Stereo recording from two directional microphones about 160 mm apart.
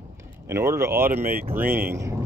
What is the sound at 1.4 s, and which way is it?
Speech, 10° right (ahead or behind).